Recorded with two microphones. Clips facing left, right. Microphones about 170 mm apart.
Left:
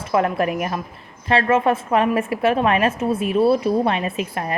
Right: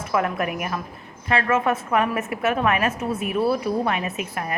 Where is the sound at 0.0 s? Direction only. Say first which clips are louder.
Left 4 dB; 30° left (ahead or behind).